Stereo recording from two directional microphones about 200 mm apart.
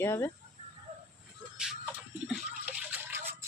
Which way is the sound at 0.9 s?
35° right (ahead or behind).